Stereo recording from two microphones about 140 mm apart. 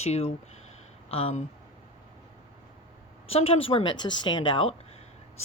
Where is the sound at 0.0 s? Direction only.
50° left (ahead or behind).